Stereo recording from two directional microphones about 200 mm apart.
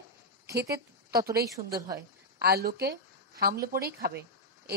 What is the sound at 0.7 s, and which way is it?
Speech, 15° right (ahead or behind).